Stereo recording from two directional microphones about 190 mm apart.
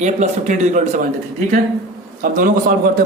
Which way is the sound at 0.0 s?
40° right (ahead or behind).